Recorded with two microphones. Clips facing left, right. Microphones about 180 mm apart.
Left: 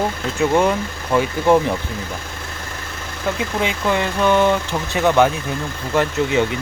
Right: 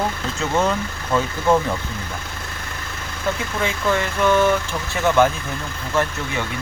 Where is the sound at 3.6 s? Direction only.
15° left (ahead or behind).